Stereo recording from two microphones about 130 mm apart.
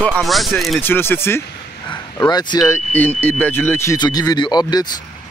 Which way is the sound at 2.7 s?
15° left (ahead or behind).